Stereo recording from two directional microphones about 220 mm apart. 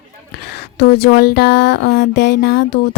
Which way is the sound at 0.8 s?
45° left (ahead or behind).